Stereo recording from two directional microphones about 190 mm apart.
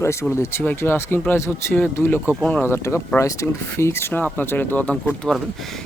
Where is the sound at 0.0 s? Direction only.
15° left (ahead or behind).